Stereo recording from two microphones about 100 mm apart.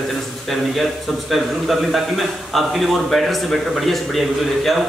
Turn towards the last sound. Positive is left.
turn(degrees=0)  # may be behind; listen again after turning